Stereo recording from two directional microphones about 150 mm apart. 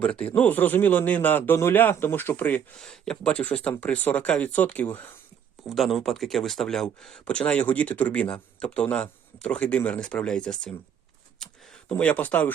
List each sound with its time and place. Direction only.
0.0 s speech: 10° left (ahead or behind)
5.6 s speech: centre (ahead or behind)
11.9 s speech: 10° left (ahead or behind)